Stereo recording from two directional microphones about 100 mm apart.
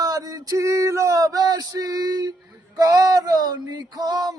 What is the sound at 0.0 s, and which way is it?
Male singing, 40° right (ahead or behind).